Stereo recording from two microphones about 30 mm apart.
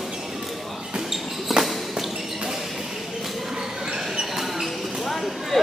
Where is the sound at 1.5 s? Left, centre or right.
Centre.